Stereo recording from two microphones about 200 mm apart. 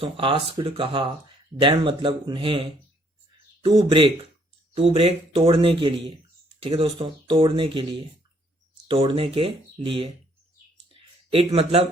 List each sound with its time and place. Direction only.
0.0 s speech: 25° right (ahead or behind)
8.9 s speech: 25° right (ahead or behind)
11.3 s speech: 30° right (ahead or behind)